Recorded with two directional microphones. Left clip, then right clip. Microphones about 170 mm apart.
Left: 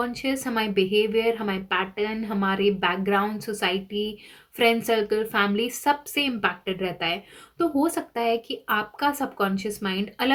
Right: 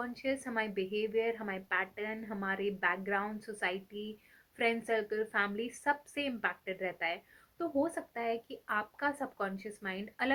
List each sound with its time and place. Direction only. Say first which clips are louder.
0.0 s a woman's voice: left 9 dB; 35° left (ahead or behind)